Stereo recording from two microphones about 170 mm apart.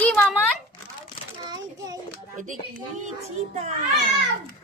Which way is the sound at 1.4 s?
25° right (ahead or behind).